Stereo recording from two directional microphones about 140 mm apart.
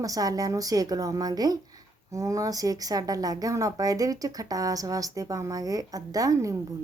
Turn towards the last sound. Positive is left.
turn(degrees=-25)  # may be behind; listen again after turning